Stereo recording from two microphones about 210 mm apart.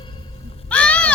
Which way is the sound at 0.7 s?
5° left (ahead or behind).